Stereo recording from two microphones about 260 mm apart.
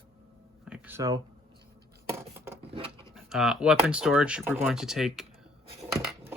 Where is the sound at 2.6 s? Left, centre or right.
Right.